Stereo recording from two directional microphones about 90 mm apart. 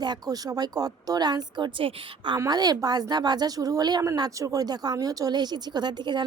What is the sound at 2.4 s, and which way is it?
Speech, 45° right (ahead or behind).